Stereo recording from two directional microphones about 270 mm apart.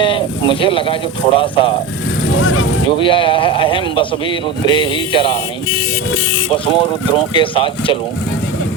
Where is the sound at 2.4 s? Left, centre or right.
Left.